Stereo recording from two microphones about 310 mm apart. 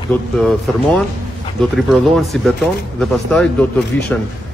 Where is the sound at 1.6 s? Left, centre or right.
Centre.